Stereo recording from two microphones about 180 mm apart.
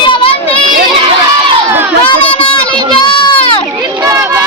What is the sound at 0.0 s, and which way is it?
Crowd, 30° left (ahead or behind).